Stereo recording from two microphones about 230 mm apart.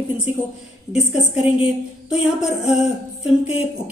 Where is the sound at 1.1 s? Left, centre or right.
Left.